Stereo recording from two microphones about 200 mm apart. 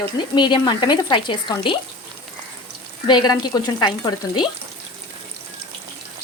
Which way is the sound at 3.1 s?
20° left (ahead or behind).